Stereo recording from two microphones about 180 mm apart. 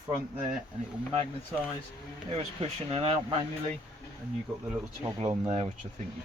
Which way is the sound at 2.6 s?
35° right (ahead or behind).